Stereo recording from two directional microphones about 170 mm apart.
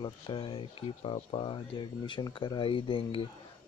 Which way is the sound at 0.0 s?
30° left (ahead or behind).